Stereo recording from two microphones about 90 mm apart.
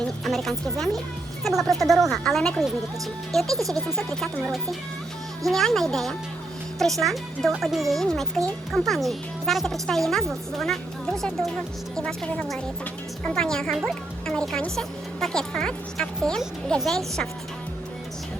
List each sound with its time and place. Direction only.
0.3 s music: centre (ahead or behind)
1.5 s a woman's voice: centre (ahead or behind)
3.8 s a woman's voice: 5° left (ahead or behind)